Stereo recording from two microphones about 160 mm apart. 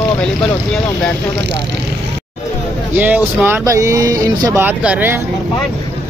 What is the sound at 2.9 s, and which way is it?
Speech, 10° right (ahead or behind).